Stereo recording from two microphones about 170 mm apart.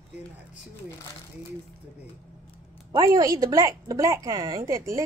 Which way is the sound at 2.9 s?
20° right (ahead or behind).